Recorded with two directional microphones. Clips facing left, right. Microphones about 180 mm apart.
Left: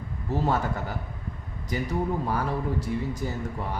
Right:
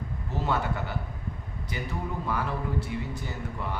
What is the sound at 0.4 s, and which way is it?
A man's voice, 40° left (ahead or behind).